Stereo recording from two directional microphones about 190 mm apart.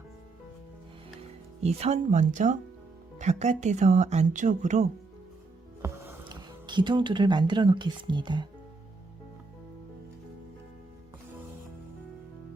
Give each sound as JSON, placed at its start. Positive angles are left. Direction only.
{"t": 1.6, "sound": "speech", "side_deg": -35}
{"t": 5.8, "sound": "speech", "side_deg": -20}